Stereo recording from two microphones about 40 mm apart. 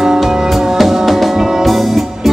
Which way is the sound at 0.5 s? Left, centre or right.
Centre.